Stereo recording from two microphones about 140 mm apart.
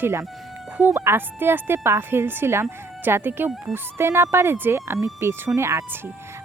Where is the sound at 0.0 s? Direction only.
20° right (ahead or behind).